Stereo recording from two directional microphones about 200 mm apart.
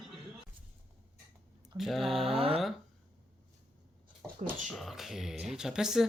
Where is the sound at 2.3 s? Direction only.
30° right (ahead or behind).